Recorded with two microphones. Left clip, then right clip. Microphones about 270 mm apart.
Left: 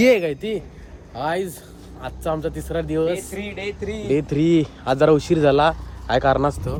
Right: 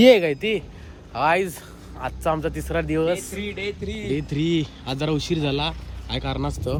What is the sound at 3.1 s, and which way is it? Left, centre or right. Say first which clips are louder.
Speech: left 1 dB; centre.